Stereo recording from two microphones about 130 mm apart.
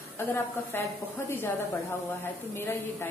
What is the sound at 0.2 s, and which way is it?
A woman's voice, 20° left (ahead or behind).